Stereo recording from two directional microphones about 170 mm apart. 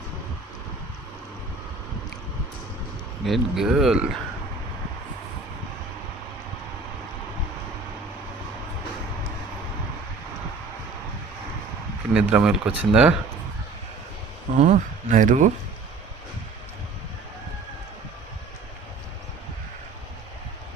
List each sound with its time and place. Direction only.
3.2 s speech: centre (ahead or behind)
12.1 s speech: 5° right (ahead or behind)
14.6 s speech: 45° right (ahead or behind)